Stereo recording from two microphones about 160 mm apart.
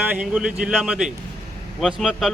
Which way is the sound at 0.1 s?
5° right (ahead or behind).